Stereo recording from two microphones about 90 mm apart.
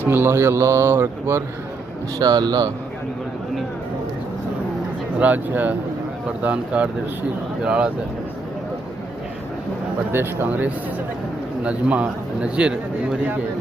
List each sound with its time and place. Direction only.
0.0 s mantra: 25° right (ahead or behind)
2.1 s speech: 50° right (ahead or behind)
5.2 s speech: 20° right (ahead or behind)
10.1 s mantra: 25° right (ahead or behind)
11.6 s speech: 15° right (ahead or behind)